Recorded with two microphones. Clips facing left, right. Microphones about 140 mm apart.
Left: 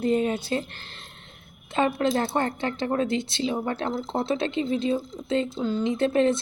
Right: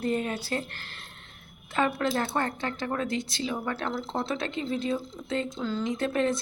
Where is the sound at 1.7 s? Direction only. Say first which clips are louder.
Left 3 dB; 25° left (ahead or behind).